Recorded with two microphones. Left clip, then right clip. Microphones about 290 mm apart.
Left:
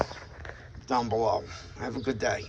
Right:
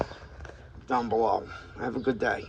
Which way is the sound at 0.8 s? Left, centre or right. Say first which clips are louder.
Right 1 dB; centre.